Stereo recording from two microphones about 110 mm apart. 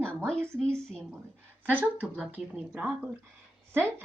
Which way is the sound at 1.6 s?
15° right (ahead or behind).